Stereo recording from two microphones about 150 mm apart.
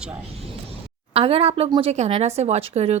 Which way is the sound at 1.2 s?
40° right (ahead or behind).